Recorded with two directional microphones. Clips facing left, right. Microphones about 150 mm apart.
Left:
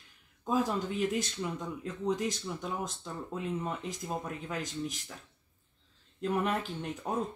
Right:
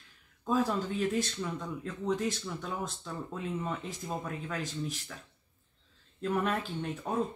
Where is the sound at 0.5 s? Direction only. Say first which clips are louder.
Right 1 dB; 15° left (ahead or behind).